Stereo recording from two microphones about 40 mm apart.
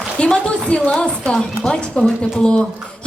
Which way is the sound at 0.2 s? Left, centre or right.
Centre.